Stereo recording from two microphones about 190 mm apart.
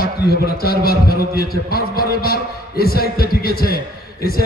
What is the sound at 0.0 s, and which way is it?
A man's voice, 55° left (ahead or behind).